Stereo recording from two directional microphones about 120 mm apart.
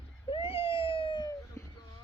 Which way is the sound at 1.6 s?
25° left (ahead or behind).